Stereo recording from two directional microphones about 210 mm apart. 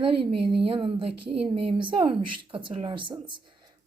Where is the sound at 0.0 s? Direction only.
25° right (ahead or behind).